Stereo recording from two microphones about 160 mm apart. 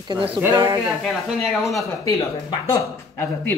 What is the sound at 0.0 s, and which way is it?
Speech, 30° right (ahead or behind).